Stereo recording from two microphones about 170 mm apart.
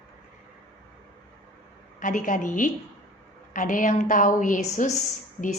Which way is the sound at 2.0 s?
50° left (ahead or behind).